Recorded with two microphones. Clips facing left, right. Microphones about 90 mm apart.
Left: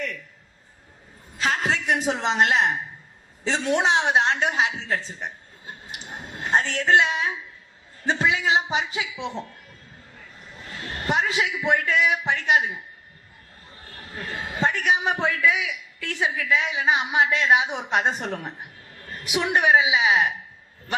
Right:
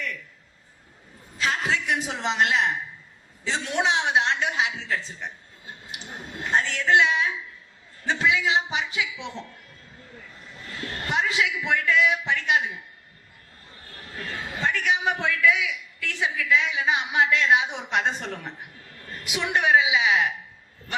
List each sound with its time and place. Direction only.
1.4 s a woman's voice: 35° left (ahead or behind)
6.4 s a man's voice: 30° left (ahead or behind)
11.1 s a man's voice: 25° left (ahead or behind)
14.2 s a man's voice: 35° left (ahead or behind)